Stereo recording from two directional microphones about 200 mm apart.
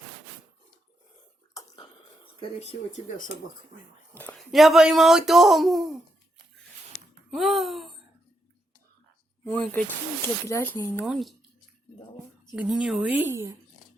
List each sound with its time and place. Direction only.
1.5 s a sound: 20° left (ahead or behind)
2.4 s speech: 30° left (ahead or behind)
4.1 s speech: 10° left (ahead or behind)
7.3 s a sound: centre (ahead or behind)
9.4 s speech: 5° left (ahead or behind)
11.0 s speech: centre (ahead or behind)
12.5 s speech: 5° right (ahead or behind)